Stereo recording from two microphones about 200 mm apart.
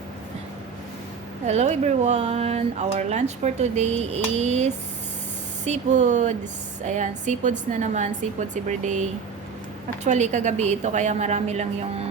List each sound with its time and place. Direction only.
1.5 s speech: 35° right (ahead or behind)